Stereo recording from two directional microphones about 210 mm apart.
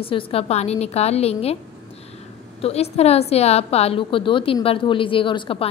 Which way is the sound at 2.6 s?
30° left (ahead or behind).